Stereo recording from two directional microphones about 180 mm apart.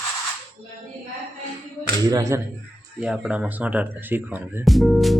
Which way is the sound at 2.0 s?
15° right (ahead or behind).